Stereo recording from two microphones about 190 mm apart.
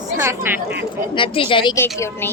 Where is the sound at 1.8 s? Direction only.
15° left (ahead or behind).